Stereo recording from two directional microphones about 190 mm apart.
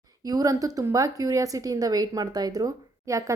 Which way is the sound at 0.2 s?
20° right (ahead or behind).